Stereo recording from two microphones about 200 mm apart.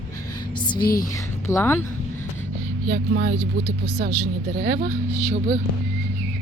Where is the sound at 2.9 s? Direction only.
55° right (ahead or behind).